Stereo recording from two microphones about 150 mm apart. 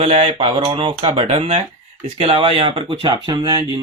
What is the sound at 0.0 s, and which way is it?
Speech, 40° right (ahead or behind).